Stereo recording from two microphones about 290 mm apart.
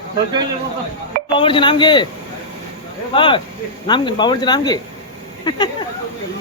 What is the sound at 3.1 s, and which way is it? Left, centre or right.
Speech, centre.